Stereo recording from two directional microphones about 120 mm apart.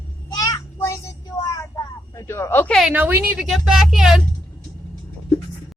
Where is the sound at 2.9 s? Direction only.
15° right (ahead or behind).